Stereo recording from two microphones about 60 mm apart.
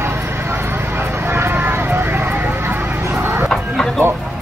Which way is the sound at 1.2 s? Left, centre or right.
Right.